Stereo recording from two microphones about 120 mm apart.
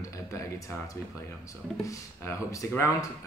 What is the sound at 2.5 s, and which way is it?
Speech, 25° left (ahead or behind).